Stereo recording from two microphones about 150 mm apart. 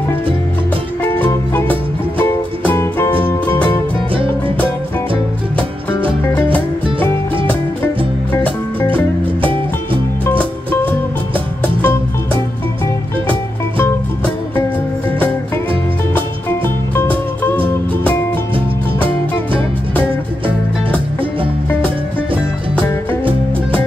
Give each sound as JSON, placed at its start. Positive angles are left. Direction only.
{"t": 1.0, "sound": "music", "side_deg": 15}
{"t": 10.2, "sound": "music", "side_deg": 15}
{"t": 16.2, "sound": "music", "side_deg": 15}